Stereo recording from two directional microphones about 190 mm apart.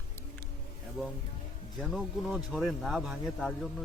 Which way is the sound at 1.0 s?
Centre (ahead or behind).